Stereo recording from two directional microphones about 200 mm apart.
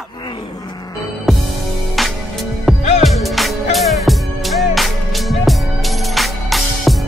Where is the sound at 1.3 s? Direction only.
Centre (ahead or behind).